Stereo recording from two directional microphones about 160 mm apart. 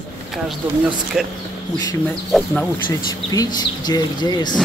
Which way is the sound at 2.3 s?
Centre (ahead or behind).